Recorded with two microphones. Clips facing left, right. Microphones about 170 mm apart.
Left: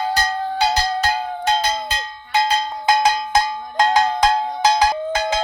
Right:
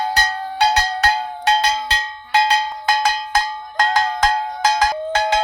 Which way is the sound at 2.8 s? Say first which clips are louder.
Left 4 dB; 20° left (ahead or behind).